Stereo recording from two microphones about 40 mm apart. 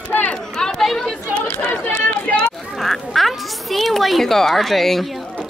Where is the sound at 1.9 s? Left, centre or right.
Left.